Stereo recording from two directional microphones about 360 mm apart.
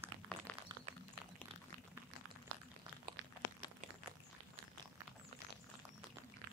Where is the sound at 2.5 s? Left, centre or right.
Right.